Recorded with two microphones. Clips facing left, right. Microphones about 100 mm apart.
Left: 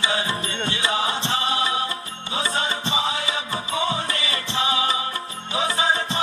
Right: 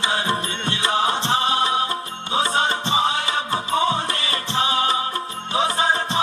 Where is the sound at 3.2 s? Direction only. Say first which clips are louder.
Right 4 dB; 55° right (ahead or behind).